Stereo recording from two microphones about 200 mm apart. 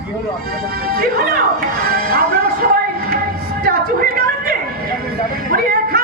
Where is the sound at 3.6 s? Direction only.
50° right (ahead or behind).